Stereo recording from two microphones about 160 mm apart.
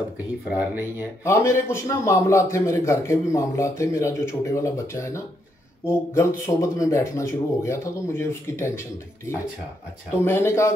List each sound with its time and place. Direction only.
0.5 s speech: 10° right (ahead or behind)
1.2 s speech: 15° left (ahead or behind)